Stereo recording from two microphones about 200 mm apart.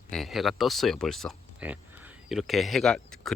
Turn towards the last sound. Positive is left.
turn(degrees=5)  # may be behind; listen again after turning